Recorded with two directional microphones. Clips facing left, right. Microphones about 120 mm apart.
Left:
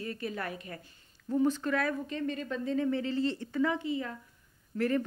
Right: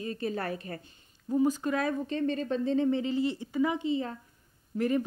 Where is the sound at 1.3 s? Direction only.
15° right (ahead or behind).